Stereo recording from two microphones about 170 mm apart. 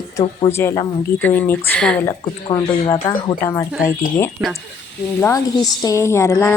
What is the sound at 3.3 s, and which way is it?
Speech, 15° left (ahead or behind).